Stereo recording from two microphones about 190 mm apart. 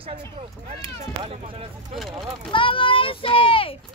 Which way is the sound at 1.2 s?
30° right (ahead or behind).